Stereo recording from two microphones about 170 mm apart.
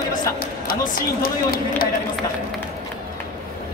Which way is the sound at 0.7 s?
60° left (ahead or behind).